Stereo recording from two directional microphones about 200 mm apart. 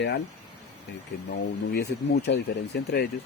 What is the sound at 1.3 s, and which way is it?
Speech, 55° left (ahead or behind).